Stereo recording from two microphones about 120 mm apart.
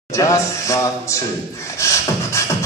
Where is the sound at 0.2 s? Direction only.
25° left (ahead or behind).